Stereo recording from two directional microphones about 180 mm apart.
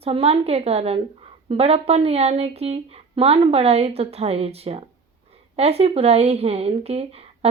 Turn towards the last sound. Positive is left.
turn(degrees=-35)  # may be behind; listen again after turning